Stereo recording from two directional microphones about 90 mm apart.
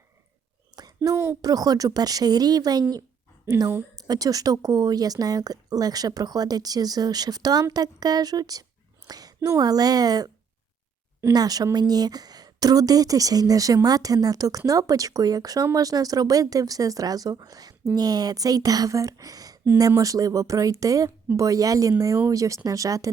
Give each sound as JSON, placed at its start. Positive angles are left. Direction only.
{"t": 0.8, "sound": "a sound", "side_deg": -45}
{"t": 1.1, "sound": "a woman's voice", "side_deg": -25}
{"t": 1.4, "sound": "speech", "side_deg": -45}
{"t": 3.9, "sound": "a woman's voice", "side_deg": -45}
{"t": 11.3, "sound": "speech", "side_deg": -45}